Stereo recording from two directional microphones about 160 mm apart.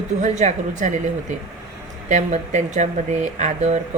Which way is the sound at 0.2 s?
45° right (ahead or behind).